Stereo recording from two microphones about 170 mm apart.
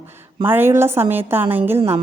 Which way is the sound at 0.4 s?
10° right (ahead or behind).